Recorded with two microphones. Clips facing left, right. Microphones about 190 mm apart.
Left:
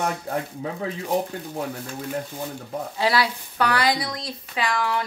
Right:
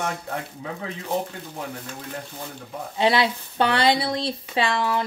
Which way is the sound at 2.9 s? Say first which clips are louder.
Right 3 dB; 25° right (ahead or behind).